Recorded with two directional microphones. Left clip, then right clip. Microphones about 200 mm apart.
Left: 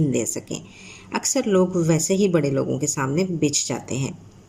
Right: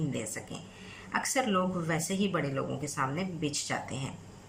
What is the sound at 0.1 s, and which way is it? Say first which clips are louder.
Speech: left 12 dB; 55° left (ahead or behind).